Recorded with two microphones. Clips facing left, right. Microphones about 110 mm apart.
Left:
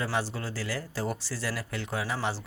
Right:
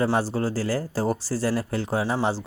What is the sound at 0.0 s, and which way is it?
Speech, 35° right (ahead or behind).